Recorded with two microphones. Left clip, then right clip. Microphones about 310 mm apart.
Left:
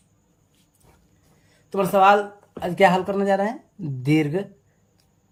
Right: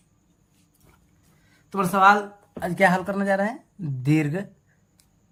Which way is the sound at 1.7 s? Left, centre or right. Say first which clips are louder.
Left 1 dB; centre.